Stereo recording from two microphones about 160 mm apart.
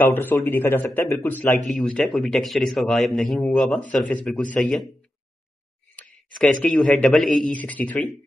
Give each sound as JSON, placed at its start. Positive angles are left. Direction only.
{"t": 0.0, "sound": "a man's voice", "side_deg": 10}
{"t": 5.9, "sound": "speech", "side_deg": 0}